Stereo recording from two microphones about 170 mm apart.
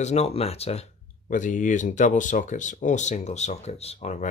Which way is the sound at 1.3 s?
50° left (ahead or behind).